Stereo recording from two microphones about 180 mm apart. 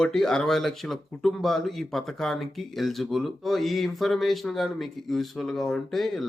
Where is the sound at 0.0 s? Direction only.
5° left (ahead or behind).